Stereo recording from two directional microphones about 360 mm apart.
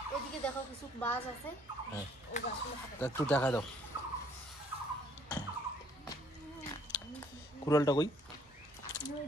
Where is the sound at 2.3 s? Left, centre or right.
Centre.